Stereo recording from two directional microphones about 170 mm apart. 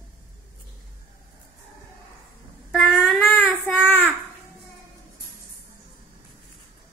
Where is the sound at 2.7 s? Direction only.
Centre (ahead or behind).